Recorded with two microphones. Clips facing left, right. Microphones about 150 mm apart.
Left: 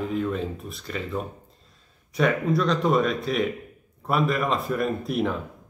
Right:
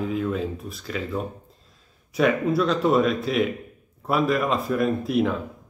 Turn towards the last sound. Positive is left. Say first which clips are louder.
# right 3 dB
turn(degrees=0)  # may be behind; listen again after turning